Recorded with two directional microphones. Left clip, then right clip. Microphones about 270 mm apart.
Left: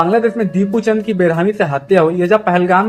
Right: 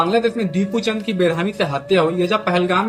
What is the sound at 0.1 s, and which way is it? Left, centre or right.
A man's voice, right.